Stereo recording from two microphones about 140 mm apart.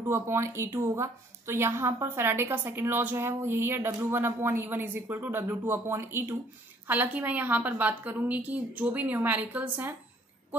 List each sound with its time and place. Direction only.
0.1 s a woman's voice: 20° right (ahead or behind)